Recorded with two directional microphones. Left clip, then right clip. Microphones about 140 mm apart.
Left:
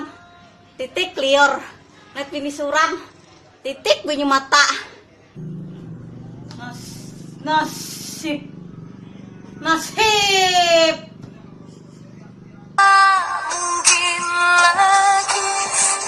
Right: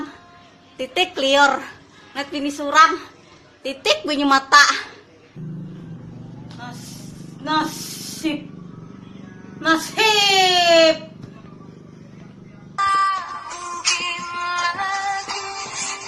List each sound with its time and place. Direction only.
1.1 s a woman's voice: 20° right (ahead or behind)
3.6 s a woman's voice: 5° right (ahead or behind)
6.6 s vehicle: centre (ahead or behind)
7.4 s speech: 5° right (ahead or behind)
9.6 s speech: 5° right (ahead or behind)
12.7 s music: 50° left (ahead or behind)